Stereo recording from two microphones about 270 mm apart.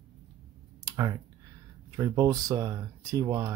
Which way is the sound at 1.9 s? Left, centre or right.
Centre.